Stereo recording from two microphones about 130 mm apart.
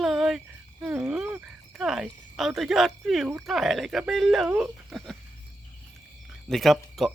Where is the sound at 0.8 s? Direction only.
10° right (ahead or behind).